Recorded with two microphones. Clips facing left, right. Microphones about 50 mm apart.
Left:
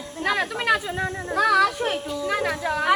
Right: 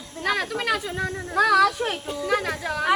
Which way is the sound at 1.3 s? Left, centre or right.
Centre.